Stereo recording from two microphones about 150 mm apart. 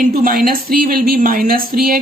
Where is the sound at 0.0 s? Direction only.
65° right (ahead or behind).